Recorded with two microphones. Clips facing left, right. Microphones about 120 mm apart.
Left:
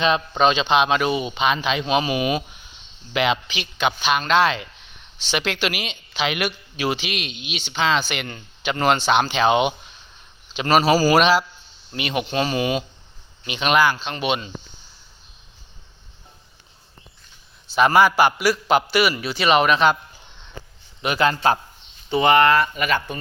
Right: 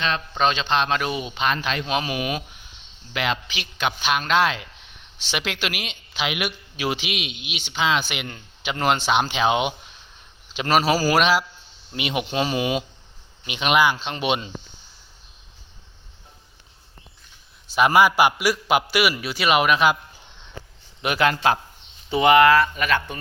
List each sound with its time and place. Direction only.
0.0 s speech: 15° left (ahead or behind); by 11.4 s 5° right (ahead or behind)
11.9 s a man's voice: 15° right (ahead or behind)
17.7 s a man's voice: 10° right (ahead or behind)
21.0 s speech: 5° right (ahead or behind)
22.6 s speech: 5° left (ahead or behind)